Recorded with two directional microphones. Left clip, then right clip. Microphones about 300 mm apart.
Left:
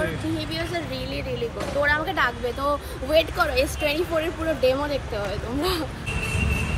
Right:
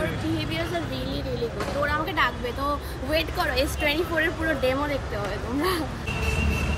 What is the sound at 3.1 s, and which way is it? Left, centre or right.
Speech, centre.